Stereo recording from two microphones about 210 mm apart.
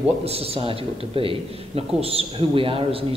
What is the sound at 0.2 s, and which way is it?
A man's voice, 30° right (ahead or behind).